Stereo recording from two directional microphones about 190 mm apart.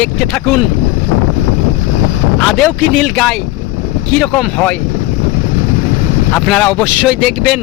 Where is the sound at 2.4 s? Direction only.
Centre (ahead or behind).